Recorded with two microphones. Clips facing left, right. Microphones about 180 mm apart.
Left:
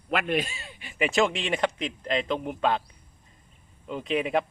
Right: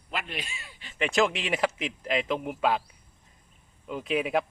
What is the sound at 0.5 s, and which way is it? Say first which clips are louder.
Speech: left 3 dB; 25° left (ahead or behind).